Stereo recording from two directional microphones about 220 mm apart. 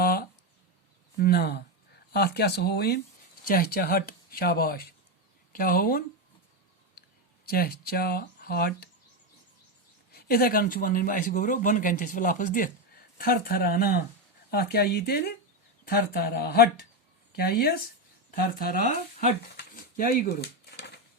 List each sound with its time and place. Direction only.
0.0 s a sound: 45° left (ahead or behind)
1.2 s speech: 45° left (ahead or behind)
7.4 s speech: 45° left (ahead or behind)
10.1 s speech: 45° left (ahead or behind)